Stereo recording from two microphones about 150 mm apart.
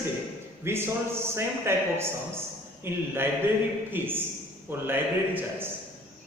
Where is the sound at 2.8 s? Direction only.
15° right (ahead or behind).